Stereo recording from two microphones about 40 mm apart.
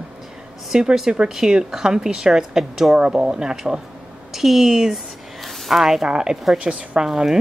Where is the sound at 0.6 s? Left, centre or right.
Centre.